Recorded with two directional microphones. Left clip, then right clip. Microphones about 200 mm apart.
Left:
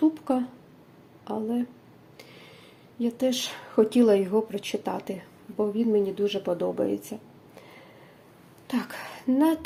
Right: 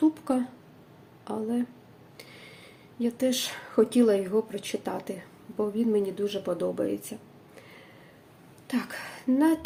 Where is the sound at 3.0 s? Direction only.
5° left (ahead or behind).